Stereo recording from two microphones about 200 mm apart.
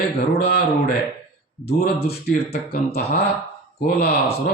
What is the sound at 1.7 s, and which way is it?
Speech, 50° left (ahead or behind).